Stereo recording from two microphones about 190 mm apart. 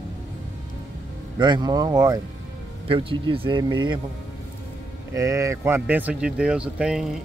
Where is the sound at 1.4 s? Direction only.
20° right (ahead or behind).